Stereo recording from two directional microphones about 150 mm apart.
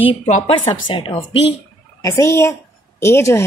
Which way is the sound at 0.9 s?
35° left (ahead or behind).